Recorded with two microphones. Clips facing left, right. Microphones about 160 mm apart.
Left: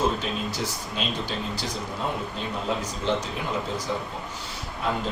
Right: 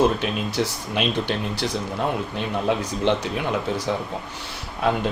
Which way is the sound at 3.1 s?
70° right (ahead or behind).